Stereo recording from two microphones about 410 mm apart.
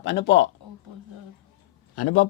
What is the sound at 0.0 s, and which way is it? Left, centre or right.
Speech, left.